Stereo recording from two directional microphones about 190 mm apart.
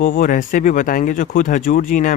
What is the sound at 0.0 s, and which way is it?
Speech, 45° left (ahead or behind).